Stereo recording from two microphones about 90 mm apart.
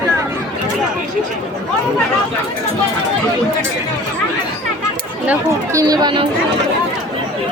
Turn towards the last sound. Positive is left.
turn(degrees=-55)  # may be behind; listen again after turning